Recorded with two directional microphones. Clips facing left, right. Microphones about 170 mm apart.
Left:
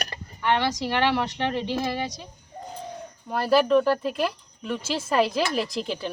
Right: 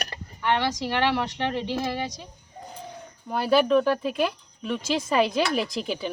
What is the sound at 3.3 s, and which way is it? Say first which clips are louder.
Speech: left 1 dB; centre (ahead or behind).